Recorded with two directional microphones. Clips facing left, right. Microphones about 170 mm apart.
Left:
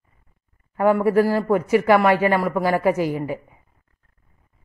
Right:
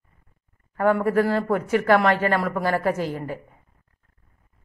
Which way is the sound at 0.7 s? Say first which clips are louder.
Left 3 dB; 10° left (ahead or behind).